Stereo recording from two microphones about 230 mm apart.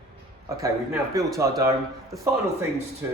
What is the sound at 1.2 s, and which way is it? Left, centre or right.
Speech, centre.